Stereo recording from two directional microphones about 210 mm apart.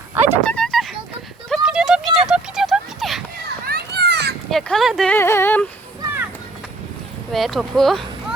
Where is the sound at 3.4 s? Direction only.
50° right (ahead or behind).